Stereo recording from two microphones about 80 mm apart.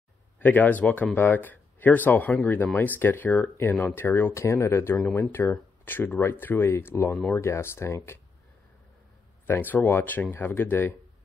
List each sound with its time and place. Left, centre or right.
0.4 s speech: left
9.5 s speech: left